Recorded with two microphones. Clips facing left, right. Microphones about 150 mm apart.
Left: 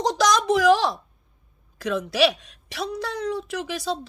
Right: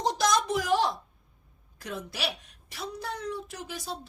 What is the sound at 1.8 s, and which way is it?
A woman's voice, 90° left.